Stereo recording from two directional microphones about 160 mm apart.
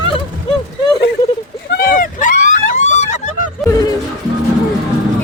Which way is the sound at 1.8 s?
60° left (ahead or behind).